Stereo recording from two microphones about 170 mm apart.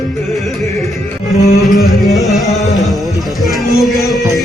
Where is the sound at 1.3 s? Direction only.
40° left (ahead or behind).